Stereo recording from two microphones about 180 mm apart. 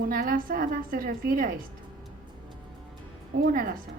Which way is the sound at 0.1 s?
50° right (ahead or behind).